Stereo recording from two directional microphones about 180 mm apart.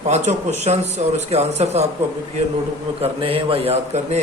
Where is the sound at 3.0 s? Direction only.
30° right (ahead or behind).